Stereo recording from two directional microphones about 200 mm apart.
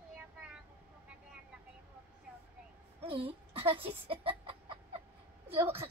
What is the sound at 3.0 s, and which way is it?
Speech, 30° right (ahead or behind).